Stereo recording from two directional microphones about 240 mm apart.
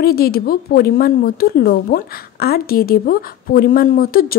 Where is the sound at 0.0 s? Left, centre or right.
Left.